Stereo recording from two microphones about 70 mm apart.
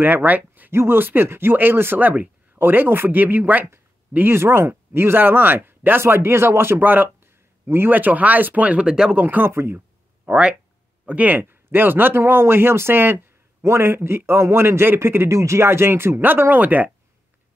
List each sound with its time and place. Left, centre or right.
0.0 s speech: right; by 9.2 s centre
9.2 s speech: right
9.8 s a sound: centre
11.1 s speech: right